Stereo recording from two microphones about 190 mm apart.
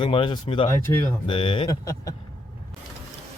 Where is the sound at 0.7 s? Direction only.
15° left (ahead or behind).